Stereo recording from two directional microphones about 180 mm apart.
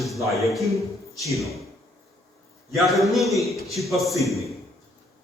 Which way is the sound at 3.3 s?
15° left (ahead or behind).